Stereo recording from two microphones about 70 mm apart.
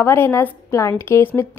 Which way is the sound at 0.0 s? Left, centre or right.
Left.